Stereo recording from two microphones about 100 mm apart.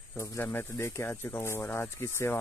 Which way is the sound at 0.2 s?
20° left (ahead or behind).